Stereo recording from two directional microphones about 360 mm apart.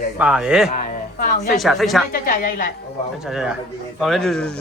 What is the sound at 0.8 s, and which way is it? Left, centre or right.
Speech, left.